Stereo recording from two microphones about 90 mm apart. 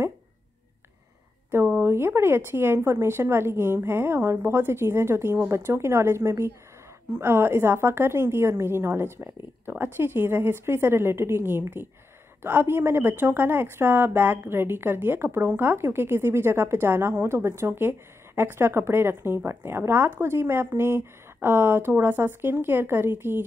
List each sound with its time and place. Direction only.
1.7 s speech: 25° right (ahead or behind)